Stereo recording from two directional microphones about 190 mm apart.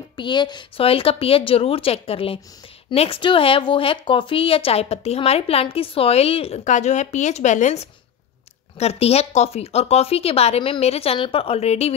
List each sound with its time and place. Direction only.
0.1 s speech: 25° left (ahead or behind)